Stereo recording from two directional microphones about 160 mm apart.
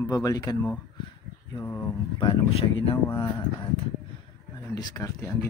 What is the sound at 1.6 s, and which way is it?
Speech, 15° left (ahead or behind).